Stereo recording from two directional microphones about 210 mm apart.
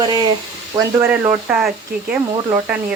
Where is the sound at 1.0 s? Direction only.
10° right (ahead or behind).